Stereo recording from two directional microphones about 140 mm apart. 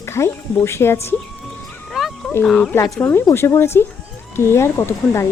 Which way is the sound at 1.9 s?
Centre (ahead or behind).